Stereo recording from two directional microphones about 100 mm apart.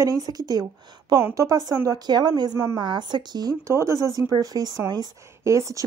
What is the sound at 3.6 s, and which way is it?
Speech, 30° right (ahead or behind).